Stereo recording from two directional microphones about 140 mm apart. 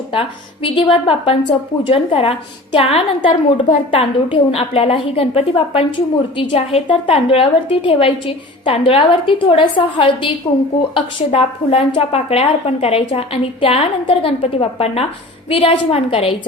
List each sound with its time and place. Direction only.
0.1 s a woman's voice: 40° left (ahead or behind)